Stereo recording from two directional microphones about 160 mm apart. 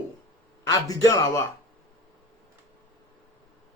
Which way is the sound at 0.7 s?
20° left (ahead or behind).